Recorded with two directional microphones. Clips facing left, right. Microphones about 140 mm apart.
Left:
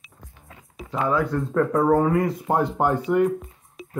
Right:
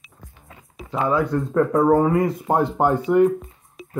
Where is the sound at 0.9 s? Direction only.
20° right (ahead or behind).